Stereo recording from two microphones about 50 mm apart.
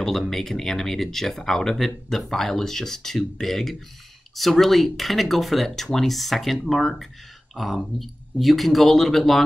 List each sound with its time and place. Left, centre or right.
0.0 s speech: centre